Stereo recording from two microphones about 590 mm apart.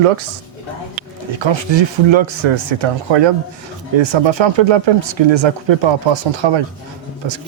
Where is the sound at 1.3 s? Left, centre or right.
Right.